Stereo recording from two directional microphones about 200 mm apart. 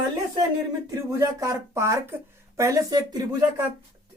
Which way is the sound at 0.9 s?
15° right (ahead or behind).